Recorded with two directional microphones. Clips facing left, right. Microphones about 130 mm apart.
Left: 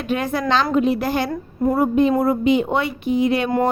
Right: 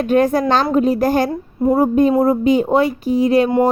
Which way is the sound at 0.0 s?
45° right (ahead or behind).